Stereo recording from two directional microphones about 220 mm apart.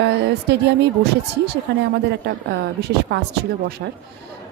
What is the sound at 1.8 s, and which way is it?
Speech, 50° right (ahead or behind).